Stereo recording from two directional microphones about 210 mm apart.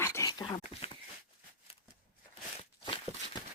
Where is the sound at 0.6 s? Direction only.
30° left (ahead or behind).